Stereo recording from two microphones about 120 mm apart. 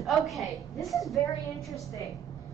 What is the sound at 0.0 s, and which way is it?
A woman's voice, centre (ahead or behind).